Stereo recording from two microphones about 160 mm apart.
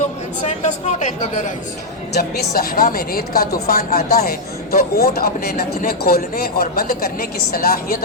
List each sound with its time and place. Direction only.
0.4 s speech: 45° left (ahead or behind)
2.1 s a man's voice: 80° left; by 7.9 s 65° left (ahead or behind)